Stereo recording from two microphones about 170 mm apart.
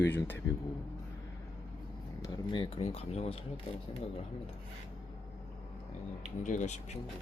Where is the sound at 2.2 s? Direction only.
30° left (ahead or behind).